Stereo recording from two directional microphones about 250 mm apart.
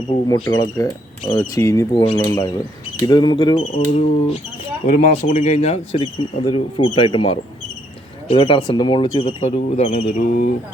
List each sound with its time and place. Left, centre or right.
0.3 s speech: centre; by 10.5 s left